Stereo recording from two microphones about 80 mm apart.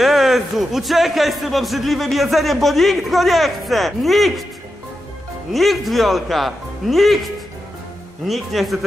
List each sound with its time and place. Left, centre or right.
0.0 s a man's voice: centre
5.5 s a man's voice: centre